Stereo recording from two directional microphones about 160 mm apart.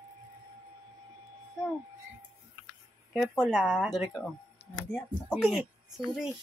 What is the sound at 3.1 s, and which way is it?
Speech, 5° right (ahead or behind).